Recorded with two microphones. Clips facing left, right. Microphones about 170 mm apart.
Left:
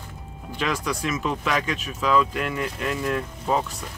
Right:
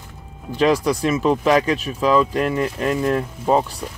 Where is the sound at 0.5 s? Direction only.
35° right (ahead or behind).